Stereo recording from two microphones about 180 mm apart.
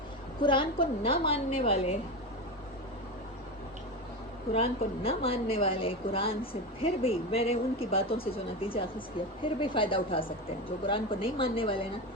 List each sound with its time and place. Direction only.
0.4 s speech: 30° left (ahead or behind)
4.5 s a woman's voice: 30° left (ahead or behind)